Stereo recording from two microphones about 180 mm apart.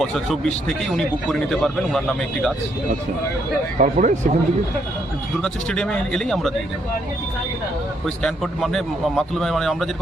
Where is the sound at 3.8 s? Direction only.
45° right (ahead or behind).